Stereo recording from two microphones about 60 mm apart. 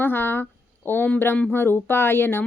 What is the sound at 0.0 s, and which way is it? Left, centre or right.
Speech, left.